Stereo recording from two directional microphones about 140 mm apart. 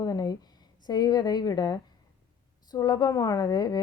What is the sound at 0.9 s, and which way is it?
A woman's voice, 30° left (ahead or behind).